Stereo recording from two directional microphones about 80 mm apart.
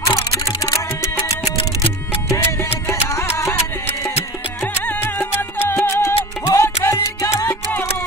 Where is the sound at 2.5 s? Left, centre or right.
Left.